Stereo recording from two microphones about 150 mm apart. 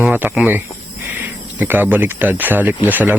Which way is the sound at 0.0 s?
10° right (ahead or behind).